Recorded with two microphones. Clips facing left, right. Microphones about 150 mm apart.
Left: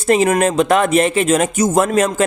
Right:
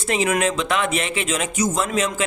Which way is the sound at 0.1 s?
45° left (ahead or behind).